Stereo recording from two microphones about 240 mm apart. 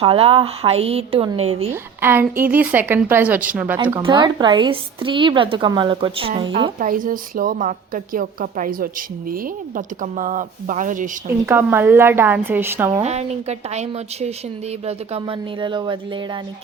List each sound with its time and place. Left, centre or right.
0.0 s speech: right
1.7 s a woman's voice: centre
4.0 s speech: centre
6.7 s a woman's voice: right
11.3 s a woman's voice: centre
13.0 s speech: right